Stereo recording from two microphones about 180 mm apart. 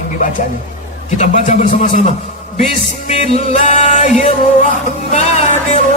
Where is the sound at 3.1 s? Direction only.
35° left (ahead or behind).